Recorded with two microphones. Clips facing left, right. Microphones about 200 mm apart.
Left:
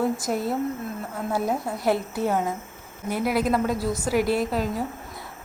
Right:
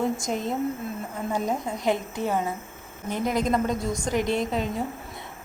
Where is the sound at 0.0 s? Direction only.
5° left (ahead or behind).